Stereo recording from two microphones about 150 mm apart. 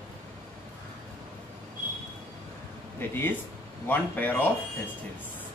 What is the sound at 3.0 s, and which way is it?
Speech, 15° left (ahead or behind).